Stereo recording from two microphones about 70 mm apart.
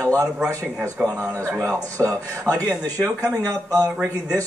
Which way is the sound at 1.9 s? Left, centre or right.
Right.